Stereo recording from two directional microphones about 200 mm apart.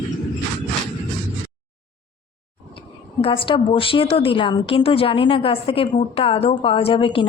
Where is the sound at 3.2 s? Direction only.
25° left (ahead or behind).